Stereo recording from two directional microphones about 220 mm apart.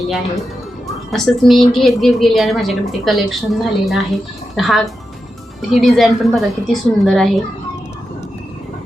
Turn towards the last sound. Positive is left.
turn(degrees=0)  # may be behind; listen again after turning